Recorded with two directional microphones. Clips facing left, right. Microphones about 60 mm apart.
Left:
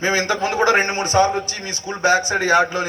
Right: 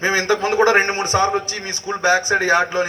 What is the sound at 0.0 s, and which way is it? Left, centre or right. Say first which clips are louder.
A man's voice: right 1 dB; right.